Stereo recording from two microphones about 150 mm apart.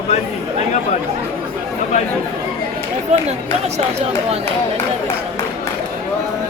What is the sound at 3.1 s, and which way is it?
Speech, 50° right (ahead or behind).